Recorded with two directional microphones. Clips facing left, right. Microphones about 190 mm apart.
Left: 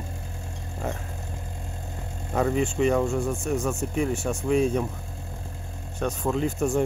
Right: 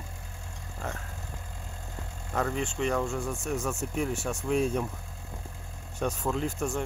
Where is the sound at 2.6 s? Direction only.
5° left (ahead or behind).